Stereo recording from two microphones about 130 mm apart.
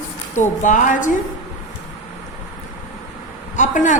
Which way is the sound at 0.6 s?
75° left (ahead or behind).